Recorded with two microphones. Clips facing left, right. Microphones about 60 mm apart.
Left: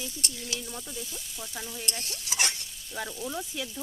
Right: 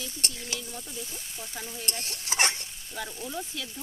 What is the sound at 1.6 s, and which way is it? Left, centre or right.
Stir, right.